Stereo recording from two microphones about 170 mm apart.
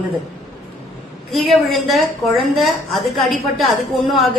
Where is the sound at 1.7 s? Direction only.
Centre (ahead or behind).